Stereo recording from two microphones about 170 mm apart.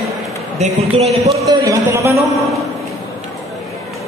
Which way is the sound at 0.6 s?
40° right (ahead or behind).